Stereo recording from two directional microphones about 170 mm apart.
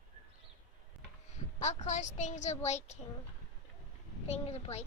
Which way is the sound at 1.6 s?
45° left (ahead or behind).